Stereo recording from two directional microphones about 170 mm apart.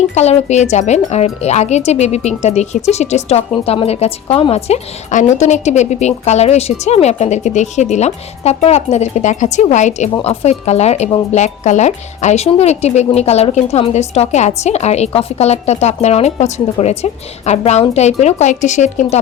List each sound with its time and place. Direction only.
0.1 s a woman's voice: 40° left (ahead or behind)